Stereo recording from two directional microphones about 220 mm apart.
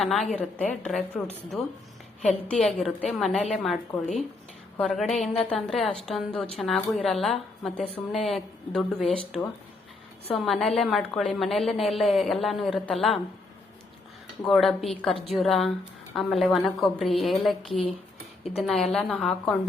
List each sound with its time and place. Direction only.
0.0 s a woman's voice: centre (ahead or behind)
4.8 s a woman's voice: centre (ahead or behind)
14.4 s a woman's voice: centre (ahead or behind)